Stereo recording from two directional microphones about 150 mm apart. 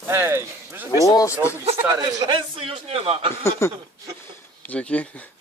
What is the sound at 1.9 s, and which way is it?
A man's voice, 25° right (ahead or behind).